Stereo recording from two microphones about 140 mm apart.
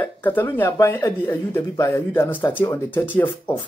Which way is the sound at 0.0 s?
15° left (ahead or behind).